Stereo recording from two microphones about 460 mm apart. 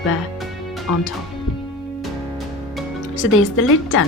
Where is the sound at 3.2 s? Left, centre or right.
Left.